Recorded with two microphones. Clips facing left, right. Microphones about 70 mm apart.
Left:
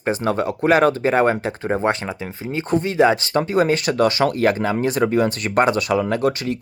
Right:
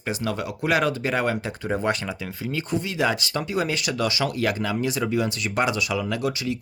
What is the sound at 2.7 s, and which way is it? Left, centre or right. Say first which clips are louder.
Speech: left 9 dB; left.